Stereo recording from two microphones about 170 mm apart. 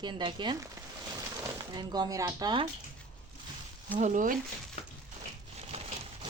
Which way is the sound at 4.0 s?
50° right (ahead or behind).